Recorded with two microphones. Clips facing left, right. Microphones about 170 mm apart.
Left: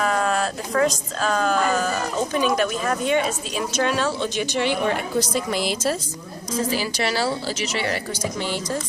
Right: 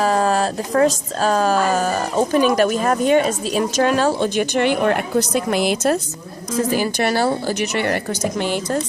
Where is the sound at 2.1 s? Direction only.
50° right (ahead or behind).